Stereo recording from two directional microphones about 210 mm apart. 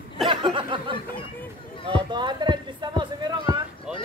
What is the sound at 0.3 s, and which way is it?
Speech, 25° right (ahead or behind).